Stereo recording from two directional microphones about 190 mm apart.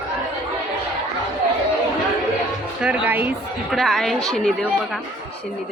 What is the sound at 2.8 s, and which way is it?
Music, 5° right (ahead or behind).